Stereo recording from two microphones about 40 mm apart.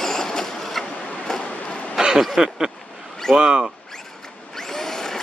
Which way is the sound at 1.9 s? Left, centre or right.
Centre.